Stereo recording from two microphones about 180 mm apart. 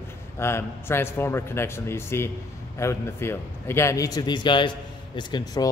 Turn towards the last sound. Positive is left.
turn(degrees=25)  # may be behind; listen again after turning